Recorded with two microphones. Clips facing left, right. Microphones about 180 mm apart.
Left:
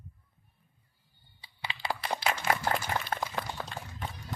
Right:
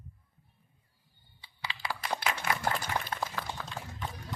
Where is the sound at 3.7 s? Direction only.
50° left (ahead or behind).